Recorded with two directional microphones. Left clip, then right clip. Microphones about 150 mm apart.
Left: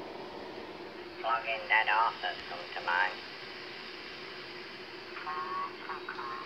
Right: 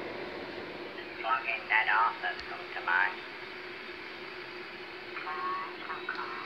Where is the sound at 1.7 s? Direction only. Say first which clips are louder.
Even; 30° left (ahead or behind).